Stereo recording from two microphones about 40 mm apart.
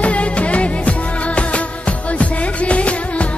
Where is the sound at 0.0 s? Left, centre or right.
Left.